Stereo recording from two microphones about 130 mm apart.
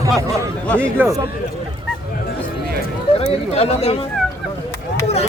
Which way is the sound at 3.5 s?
50° left (ahead or behind).